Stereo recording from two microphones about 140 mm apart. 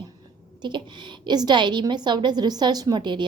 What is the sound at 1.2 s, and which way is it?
A woman's voice, 30° right (ahead or behind).